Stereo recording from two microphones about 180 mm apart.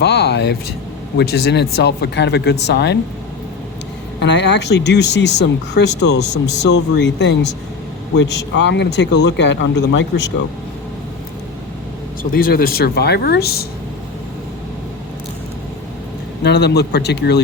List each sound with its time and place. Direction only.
0.0 s speech: 65° left (ahead or behind)
4.2 s speech: 75° left (ahead or behind)
12.3 s speech: 55° left (ahead or behind)
16.4 s speech: 65° left (ahead or behind)